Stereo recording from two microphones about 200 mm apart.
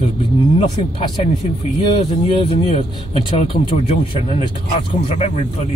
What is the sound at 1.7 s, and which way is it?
Speech, 25° left (ahead or behind).